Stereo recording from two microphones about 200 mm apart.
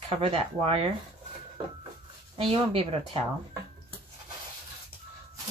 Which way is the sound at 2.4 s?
30° right (ahead or behind).